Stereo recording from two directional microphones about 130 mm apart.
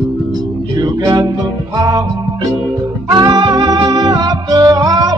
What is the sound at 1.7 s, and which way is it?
Music, 30° right (ahead or behind).